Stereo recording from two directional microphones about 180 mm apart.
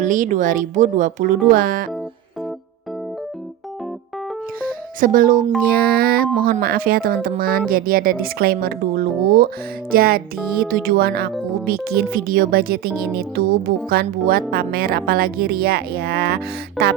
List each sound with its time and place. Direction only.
0.0 s speech: 45° right (ahead or behind)
4.6 s music: 50° right (ahead or behind)
5.6 s speech: 60° right (ahead or behind)